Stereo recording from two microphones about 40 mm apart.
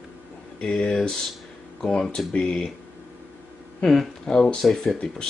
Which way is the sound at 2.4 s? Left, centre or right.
Centre.